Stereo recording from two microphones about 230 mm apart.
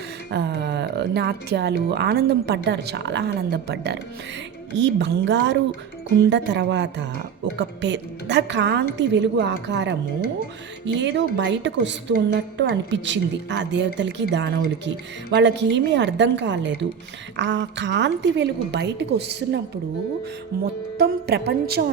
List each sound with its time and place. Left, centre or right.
0.3 s speech: right
20.5 s music: right
21.0 s speech: right